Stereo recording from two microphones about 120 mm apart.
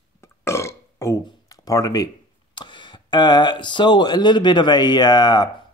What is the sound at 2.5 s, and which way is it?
Speech, 40° left (ahead or behind).